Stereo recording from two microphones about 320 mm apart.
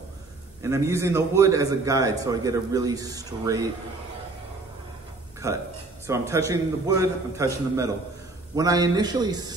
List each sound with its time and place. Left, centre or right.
0.6 s a man's voice: centre
5.4 s a man's voice: centre